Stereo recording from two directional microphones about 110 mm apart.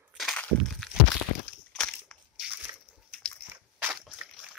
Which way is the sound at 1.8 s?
5° left (ahead or behind).